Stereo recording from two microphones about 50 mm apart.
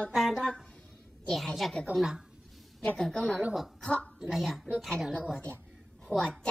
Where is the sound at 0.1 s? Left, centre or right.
Centre.